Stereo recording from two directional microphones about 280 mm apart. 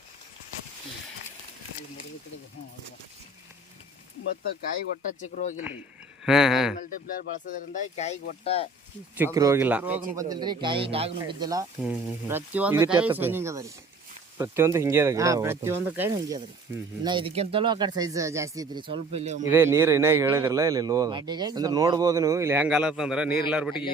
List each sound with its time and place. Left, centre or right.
5.3 s speech: left
6.2 s speech: centre
6.7 s speech: left
9.1 s speech: centre
19.5 s speech: centre